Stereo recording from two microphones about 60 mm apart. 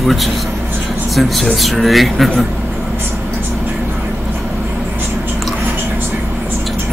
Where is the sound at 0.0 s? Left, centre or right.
Centre.